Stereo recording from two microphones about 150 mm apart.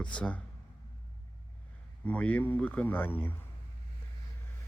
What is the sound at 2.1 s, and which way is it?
Speech, 10° left (ahead or behind).